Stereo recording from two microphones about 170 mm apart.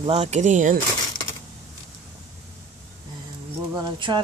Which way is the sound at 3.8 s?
30° right (ahead or behind).